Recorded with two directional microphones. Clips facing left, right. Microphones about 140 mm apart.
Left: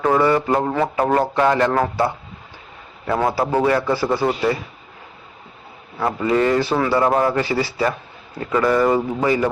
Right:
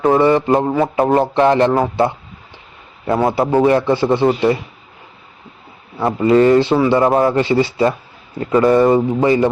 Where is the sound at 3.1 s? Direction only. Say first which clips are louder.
Right 4 dB; 20° right (ahead or behind).